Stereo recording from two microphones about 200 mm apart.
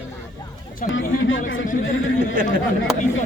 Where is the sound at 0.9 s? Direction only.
70° left (ahead or behind).